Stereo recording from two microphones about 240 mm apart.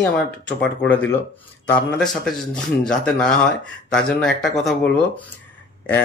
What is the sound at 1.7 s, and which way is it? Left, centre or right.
A man's voice, centre.